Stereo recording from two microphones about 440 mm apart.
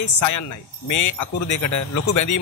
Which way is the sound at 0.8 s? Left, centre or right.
Left.